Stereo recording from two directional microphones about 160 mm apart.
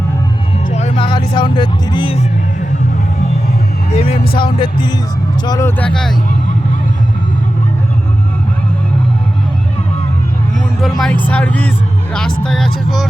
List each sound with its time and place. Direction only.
0.7 s music: 45° left (ahead or behind)
0.9 s speech: 30° left (ahead or behind)
3.9 s music: 40° left (ahead or behind)
5.5 s speech: 20° left (ahead or behind)
5.8 s speech: 5° left (ahead or behind)
10.5 s speech: centre (ahead or behind)